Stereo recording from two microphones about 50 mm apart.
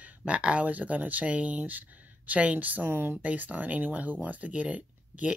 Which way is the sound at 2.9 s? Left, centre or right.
Right.